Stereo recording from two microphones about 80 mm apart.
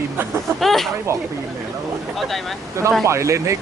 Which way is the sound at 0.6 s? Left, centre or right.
Centre.